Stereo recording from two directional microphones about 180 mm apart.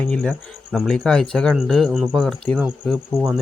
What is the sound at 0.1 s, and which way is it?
Speech, 5° left (ahead or behind).